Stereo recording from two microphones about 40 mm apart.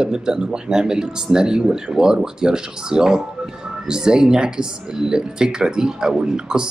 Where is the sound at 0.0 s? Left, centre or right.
Centre.